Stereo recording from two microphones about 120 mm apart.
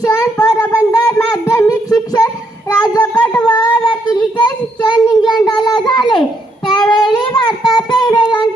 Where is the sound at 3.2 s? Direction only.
10° left (ahead or behind).